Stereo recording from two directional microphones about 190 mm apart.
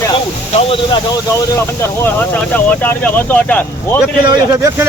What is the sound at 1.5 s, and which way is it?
Speech, 15° left (ahead or behind).